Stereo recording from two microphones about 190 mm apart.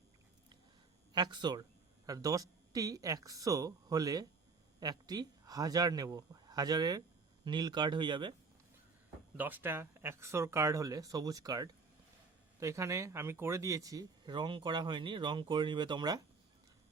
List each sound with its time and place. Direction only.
1.1 s speech: 20° right (ahead or behind)
9.4 s speech: 10° right (ahead or behind)